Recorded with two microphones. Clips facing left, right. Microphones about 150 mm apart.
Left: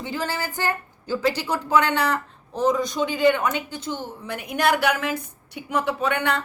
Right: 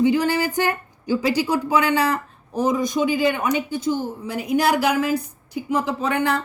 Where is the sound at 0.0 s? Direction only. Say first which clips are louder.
Right 10 dB; 15° right (ahead or behind).